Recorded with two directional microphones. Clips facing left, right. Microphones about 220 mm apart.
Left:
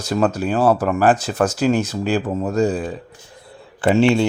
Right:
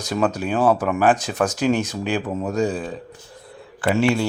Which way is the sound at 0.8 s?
5° left (ahead or behind).